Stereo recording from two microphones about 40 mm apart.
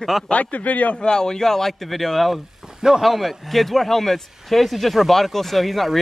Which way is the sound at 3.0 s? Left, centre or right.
Centre.